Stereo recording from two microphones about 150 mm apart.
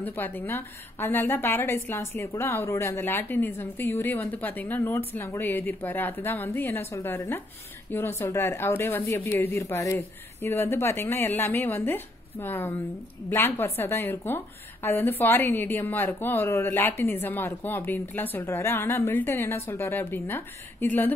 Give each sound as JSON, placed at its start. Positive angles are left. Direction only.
{"t": 0.0, "sound": "a woman's voice", "side_deg": 10}